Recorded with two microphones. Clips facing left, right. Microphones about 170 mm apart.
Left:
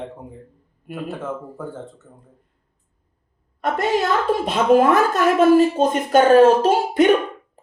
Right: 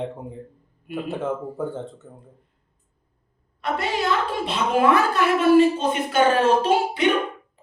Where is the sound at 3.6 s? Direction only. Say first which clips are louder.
Left 5 dB; 45° left (ahead or behind).